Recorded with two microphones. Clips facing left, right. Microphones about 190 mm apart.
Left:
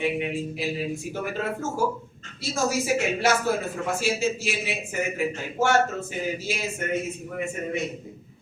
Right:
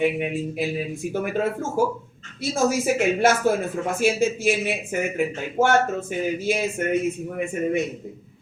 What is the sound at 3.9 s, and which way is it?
Speech, 55° right (ahead or behind).